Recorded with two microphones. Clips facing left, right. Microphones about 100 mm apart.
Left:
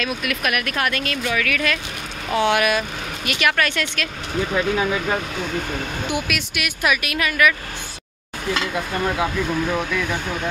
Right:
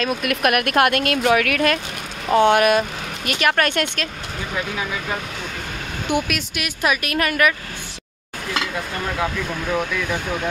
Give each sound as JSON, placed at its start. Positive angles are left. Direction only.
{"t": 0.0, "sound": "speech", "side_deg": -45}
{"t": 4.6, "sound": "speech", "side_deg": 30}
{"t": 6.0, "sound": "speech", "side_deg": -45}
{"t": 8.7, "sound": "speech", "side_deg": 10}